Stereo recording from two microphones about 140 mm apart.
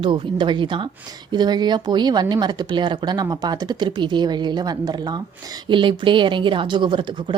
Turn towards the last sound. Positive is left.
turn(degrees=-35)  # may be behind; listen again after turning